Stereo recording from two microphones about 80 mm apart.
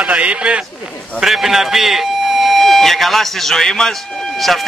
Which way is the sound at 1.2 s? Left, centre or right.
Centre.